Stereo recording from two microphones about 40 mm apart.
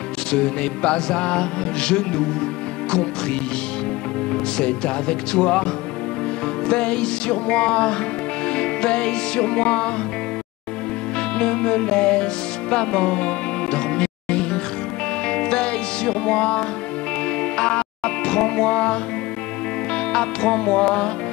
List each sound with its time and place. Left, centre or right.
0.3 s music: left
4.3 s music: left
6.7 s music: left
11.3 s music: left
20.1 s music: left